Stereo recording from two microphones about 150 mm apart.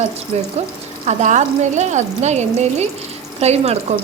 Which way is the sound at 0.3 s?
45° right (ahead or behind).